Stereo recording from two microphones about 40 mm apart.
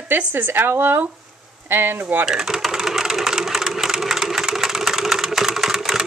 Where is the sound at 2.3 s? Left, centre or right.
Centre.